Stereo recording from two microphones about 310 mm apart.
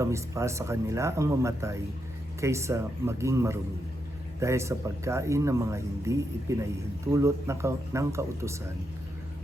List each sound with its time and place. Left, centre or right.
0.0 s speech: centre